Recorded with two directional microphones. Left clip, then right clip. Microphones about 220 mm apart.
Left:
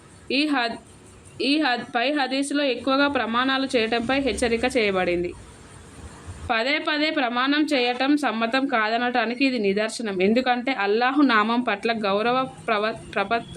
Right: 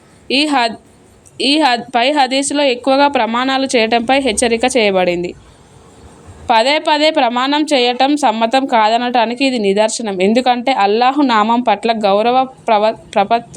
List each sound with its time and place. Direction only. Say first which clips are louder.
0.3 s a woman's voice: right 9 dB; 30° right (ahead or behind)
6.5 s a woman's voice: right 11 dB; 25° right (ahead or behind)